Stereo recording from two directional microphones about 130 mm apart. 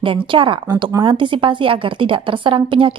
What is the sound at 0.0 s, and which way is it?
A woman's voice, 40° right (ahead or behind).